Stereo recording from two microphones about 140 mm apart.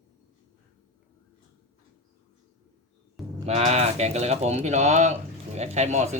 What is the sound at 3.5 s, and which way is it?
Speech, 50° right (ahead or behind).